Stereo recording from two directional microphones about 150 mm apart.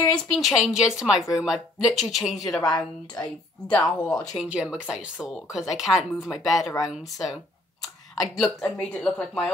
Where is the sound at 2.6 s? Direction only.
25° left (ahead or behind).